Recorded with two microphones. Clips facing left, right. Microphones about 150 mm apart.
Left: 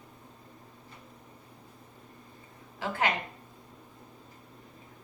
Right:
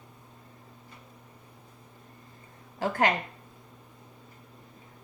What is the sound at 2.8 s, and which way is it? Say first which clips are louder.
Speech: right 5 dB; 40° right (ahead or behind).